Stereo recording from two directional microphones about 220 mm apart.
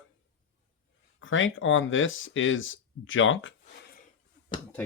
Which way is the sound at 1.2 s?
60° left (ahead or behind).